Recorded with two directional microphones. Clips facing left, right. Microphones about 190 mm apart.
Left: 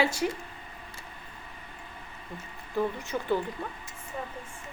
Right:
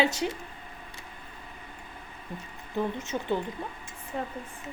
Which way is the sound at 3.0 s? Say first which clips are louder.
Left 1 dB; 20° right (ahead or behind).